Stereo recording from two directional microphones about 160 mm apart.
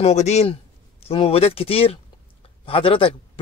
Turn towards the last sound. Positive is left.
turn(degrees=35)  # may be behind; listen again after turning